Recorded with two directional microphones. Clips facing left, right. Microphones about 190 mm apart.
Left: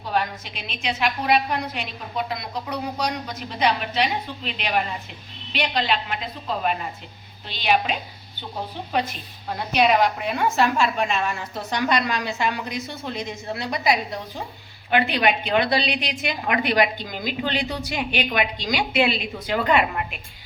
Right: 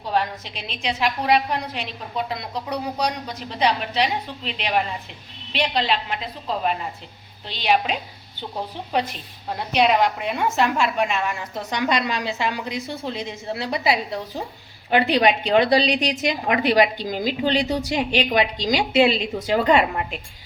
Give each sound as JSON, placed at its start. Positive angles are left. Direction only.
{"t": 0.1, "sound": "a woman's voice", "side_deg": -30}
{"t": 7.4, "sound": "a woman's voice", "side_deg": -30}
{"t": 9.7, "sound": "a woman's voice", "side_deg": -25}